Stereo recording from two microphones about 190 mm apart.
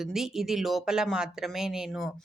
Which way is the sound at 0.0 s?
Centre (ahead or behind).